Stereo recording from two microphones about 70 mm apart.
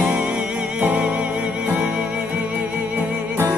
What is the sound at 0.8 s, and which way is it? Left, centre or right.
Music, right.